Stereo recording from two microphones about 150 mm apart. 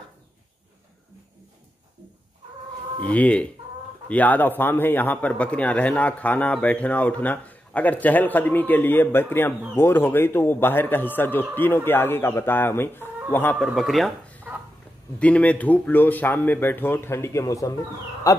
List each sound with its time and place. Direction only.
3.1 s speech: 10° left (ahead or behind)
13.6 s speech: centre (ahead or behind); by 17.7 s 20° left (ahead or behind)
18.3 s owl: 20° left (ahead or behind)